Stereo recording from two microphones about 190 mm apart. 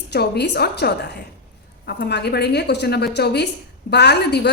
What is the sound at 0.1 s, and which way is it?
A woman's voice, 60° left (ahead or behind).